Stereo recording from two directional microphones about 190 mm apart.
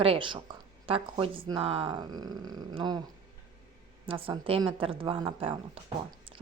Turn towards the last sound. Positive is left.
turn(degrees=-30)  # may be behind; listen again after turning